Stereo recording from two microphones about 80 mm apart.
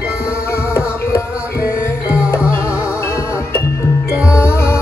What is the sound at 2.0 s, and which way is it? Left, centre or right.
Music, centre.